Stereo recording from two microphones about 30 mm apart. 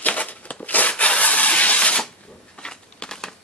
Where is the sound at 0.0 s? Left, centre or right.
Left.